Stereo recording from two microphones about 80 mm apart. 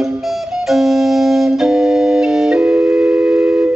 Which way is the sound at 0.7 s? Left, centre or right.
Centre.